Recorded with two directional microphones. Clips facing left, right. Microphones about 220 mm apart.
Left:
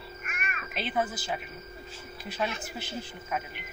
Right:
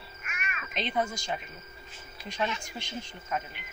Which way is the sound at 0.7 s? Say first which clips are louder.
Even; 5° left (ahead or behind).